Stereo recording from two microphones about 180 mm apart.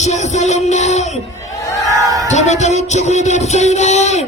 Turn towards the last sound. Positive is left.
turn(degrees=40)  # may be behind; listen again after turning